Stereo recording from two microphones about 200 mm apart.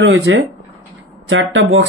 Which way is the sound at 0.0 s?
70° right (ahead or behind).